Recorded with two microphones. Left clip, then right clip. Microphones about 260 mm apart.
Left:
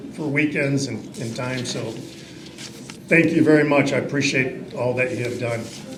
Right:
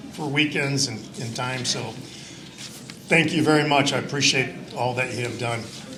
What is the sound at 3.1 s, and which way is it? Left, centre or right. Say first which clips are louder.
Speech: left 3 dB; right.